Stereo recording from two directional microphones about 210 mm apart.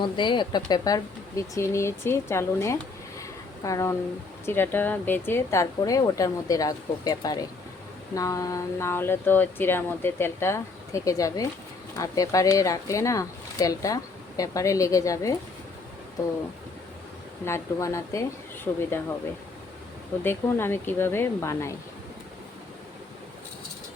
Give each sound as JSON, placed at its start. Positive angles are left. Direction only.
{"t": 0.0, "sound": "speech", "side_deg": 20}
{"t": 3.2, "sound": "a sound", "side_deg": 15}
{"t": 4.4, "sound": "speech", "side_deg": 10}
{"t": 17.4, "sound": "speech", "side_deg": 15}
{"t": 20.2, "sound": "speech", "side_deg": 10}